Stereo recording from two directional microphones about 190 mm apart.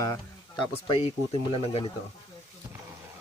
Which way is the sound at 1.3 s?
25° right (ahead or behind).